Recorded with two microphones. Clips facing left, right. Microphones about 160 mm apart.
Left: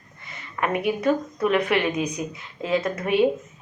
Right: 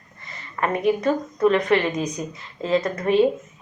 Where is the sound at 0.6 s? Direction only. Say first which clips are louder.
Right 2 dB; 10° left (ahead or behind).